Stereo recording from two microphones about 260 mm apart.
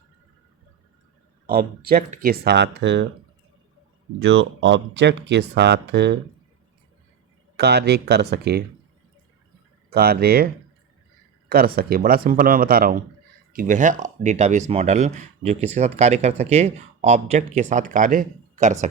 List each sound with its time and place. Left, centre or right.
1.5 s speech: right
4.2 s speech: right
7.5 s speech: right
9.9 s speech: right